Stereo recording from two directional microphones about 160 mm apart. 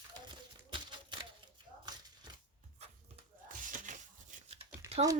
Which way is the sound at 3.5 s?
55° right (ahead or behind).